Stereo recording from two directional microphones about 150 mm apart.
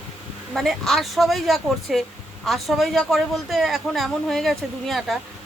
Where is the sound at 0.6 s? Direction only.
Centre (ahead or behind).